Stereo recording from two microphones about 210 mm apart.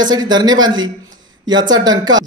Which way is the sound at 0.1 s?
20° right (ahead or behind).